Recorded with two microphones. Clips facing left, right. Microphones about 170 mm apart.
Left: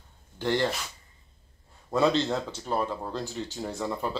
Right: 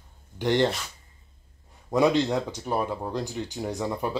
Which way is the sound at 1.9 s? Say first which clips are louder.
Right 2 dB; 15° right (ahead or behind).